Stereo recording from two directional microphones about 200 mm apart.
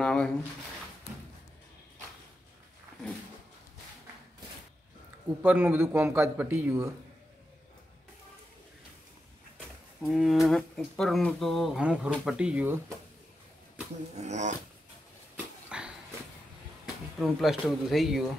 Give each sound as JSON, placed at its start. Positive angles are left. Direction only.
{"t": 0.0, "sound": "a sound", "side_deg": 5}
{"t": 5.4, "sound": "a man's voice", "side_deg": -10}
{"t": 10.0, "sound": "speech", "side_deg": 0}
{"t": 14.1, "sound": "speech", "side_deg": -35}
{"t": 15.3, "sound": "dog", "side_deg": -5}
{"t": 17.2, "sound": "speech", "side_deg": 0}